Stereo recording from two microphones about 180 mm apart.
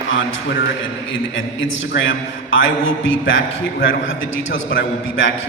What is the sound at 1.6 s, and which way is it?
A man's voice, 90° left.